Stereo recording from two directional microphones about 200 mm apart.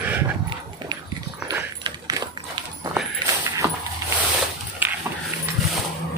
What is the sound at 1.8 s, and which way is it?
Keys jangling, 20° right (ahead or behind).